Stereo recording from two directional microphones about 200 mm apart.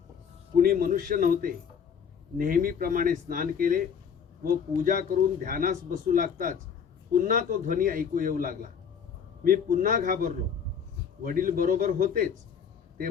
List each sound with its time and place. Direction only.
0.5 s speech: 45° right (ahead or behind)